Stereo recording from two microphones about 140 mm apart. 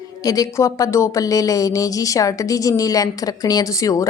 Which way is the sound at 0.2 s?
25° left (ahead or behind).